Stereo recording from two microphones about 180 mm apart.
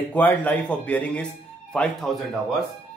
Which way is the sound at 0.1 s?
10° left (ahead or behind).